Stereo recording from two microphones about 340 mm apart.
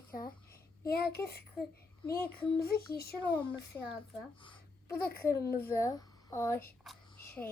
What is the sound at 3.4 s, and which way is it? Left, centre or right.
Speech, centre.